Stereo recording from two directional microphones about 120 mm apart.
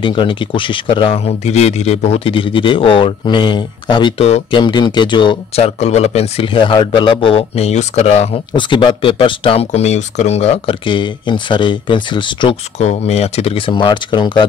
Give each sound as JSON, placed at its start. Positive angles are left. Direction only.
{"t": 0.0, "sound": "speech", "side_deg": 45}
{"t": 5.6, "sound": "a man's voice", "side_deg": 65}
{"t": 8.5, "sound": "speech", "side_deg": 40}
{"t": 9.7, "sound": "a man's voice", "side_deg": 70}
{"t": 10.9, "sound": "speech", "side_deg": 40}
{"t": 12.7, "sound": "speech", "side_deg": 65}